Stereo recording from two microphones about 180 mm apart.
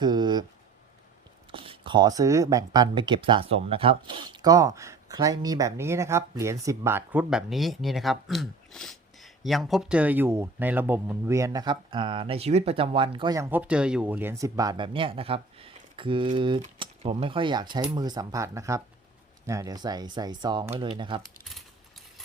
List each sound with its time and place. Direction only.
0.0 s speech: 25° right (ahead or behind)
1.5 s speech: 30° right (ahead or behind)